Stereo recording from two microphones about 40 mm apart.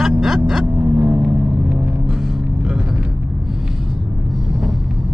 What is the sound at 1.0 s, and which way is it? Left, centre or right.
Vehicle, right.